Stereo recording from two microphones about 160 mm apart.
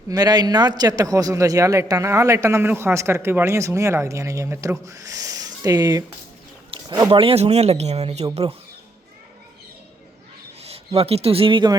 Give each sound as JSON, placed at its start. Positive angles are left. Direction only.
{"t": 0.1, "sound": "a man's voice", "side_deg": -25}
{"t": 10.6, "sound": "speech", "side_deg": -40}